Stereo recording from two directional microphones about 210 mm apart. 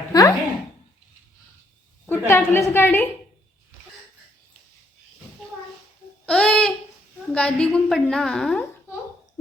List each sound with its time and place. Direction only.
0.1 s speech: 15° left (ahead or behind)
2.0 s a woman's voice: 10° left (ahead or behind)
6.2 s babbling: 5° left (ahead or behind)
7.3 s a woman's voice: 5° left (ahead or behind)